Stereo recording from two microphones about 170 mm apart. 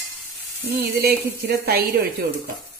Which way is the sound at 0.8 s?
70° right (ahead or behind).